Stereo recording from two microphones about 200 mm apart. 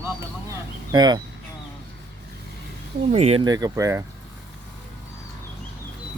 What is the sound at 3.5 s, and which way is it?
Speech, 15° right (ahead or behind).